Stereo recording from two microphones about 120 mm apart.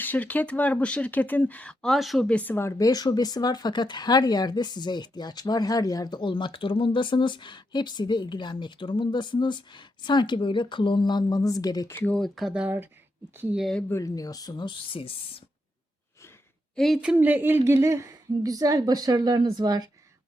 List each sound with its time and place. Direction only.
0.0 s speech: 15° left (ahead or behind); by 11.9 s 30° left (ahead or behind)
11.9 s speech: 10° left (ahead or behind); by 13.6 s 15° right (ahead or behind)
13.6 s speech: centre (ahead or behind)
13.9 s speech: 30° left (ahead or behind); by 15.4 s 50° left (ahead or behind)
16.7 s a woman's voice: centre (ahead or behind)
17.0 s speech: 10° right (ahead or behind); by 19.9 s 35° right (ahead or behind)